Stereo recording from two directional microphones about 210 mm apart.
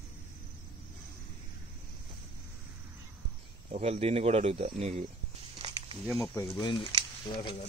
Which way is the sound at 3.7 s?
30° right (ahead or behind).